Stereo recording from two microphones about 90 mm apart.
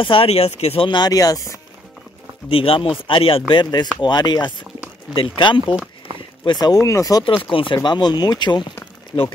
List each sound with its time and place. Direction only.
0.0 s speech: 80° left
0.9 s speech: 45° left (ahead or behind)
2.5 s speech: 90° left; by 4.6 s 55° left (ahead or behind)
5.1 s speech: 75° left (ahead or behind)
6.4 s speech: 55° left (ahead or behind)
7.4 s speech: 65° left (ahead or behind)